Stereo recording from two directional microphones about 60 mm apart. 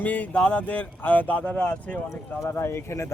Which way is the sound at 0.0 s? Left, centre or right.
Left.